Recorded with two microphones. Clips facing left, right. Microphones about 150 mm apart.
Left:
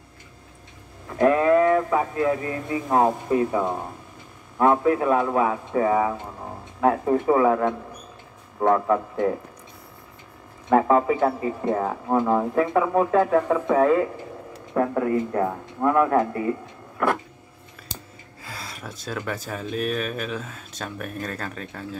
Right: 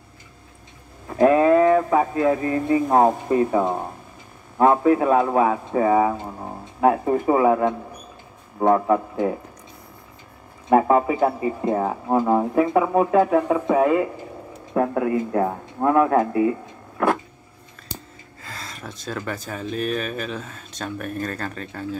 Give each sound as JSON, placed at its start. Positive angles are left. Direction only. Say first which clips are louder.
{"t": 1.1, "sound": "a sound", "louder": "right 3 dB", "side_deg": -25}
{"t": 3.5, "sound": "speech", "louder": "right 3 dB", "side_deg": -20}
{"t": 10.7, "sound": "speech", "louder": "right 1 dB", "side_deg": -15}
{"t": 18.4, "sound": "speech", "louder": "right 1 dB", "side_deg": 10}